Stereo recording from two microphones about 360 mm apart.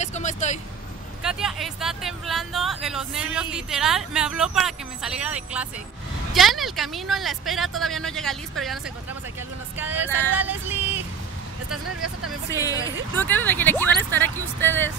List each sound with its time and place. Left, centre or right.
0.0 s speech: centre
1.2 s speech: centre
12.4 s speech: centre